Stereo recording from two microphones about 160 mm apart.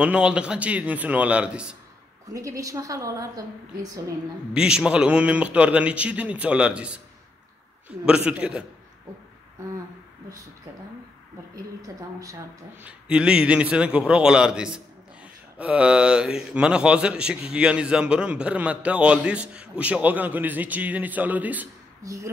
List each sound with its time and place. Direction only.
0.0 s a man's voice: 5° right (ahead or behind)
2.3 s a woman's voice: 20° right (ahead or behind)
4.6 s a man's voice: 5° right (ahead or behind)
8.0 s a man's voice: 5° right (ahead or behind)
12.8 s a man's voice: 5° right (ahead or behind)